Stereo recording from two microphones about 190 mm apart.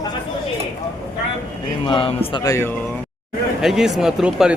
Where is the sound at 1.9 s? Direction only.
30° left (ahead or behind).